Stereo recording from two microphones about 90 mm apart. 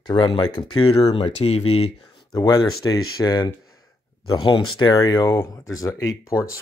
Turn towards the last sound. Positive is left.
turn(degrees=35)  # may be behind; listen again after turning